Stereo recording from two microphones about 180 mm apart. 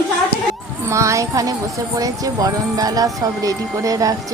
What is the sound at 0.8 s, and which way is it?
Speech, 15° right (ahead or behind).